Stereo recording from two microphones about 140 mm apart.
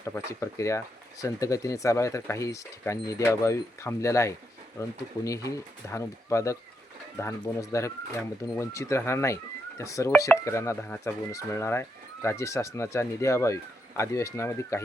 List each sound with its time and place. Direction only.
0.0 s speech: 20° left (ahead or behind)